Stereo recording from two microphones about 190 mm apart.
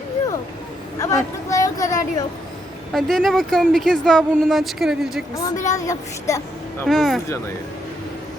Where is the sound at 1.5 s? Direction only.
15° left (ahead or behind).